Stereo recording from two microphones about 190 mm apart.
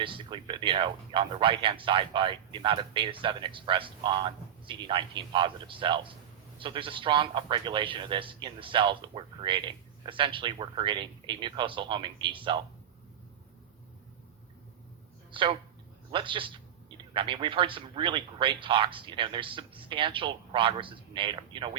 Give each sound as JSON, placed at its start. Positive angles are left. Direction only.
{"t": 0.0, "sound": "speech", "side_deg": -25}
{"t": 15.3, "sound": "speech", "side_deg": -25}